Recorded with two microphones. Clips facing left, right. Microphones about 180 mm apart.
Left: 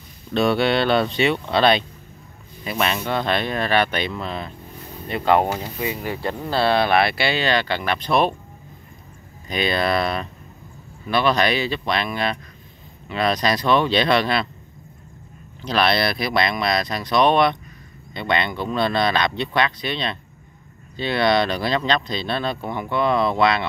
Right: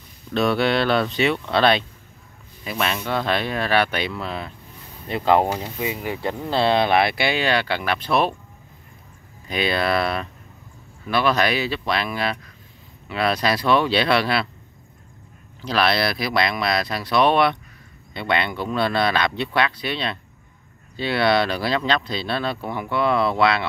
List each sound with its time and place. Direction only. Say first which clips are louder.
0.3 s speech: left 1 dB; centre (ahead or behind)
5.0 s speech: even; 25° right (ahead or behind)
5.4 s speech: even; centre (ahead or behind)
5.8 s speech: even; 15° right (ahead or behind)
9.5 s speech: left 1 dB; 5° right (ahead or behind)
15.6 s speech: left 1 dB; centre (ahead or behind)